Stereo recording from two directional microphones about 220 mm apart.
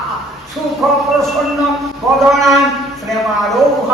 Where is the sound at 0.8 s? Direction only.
Centre (ahead or behind).